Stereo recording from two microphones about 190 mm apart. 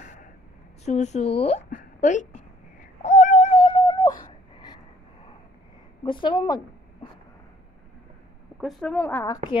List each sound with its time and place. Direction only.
0.0 s a sound: 40° left (ahead or behind)
0.8 s a woman's voice: 35° left (ahead or behind)
2.8 s cat: 40° left (ahead or behind)
3.6 s a sound: 20° left (ahead or behind)
6.0 s speech: 25° left (ahead or behind)
8.5 s a woman's voice: centre (ahead or behind)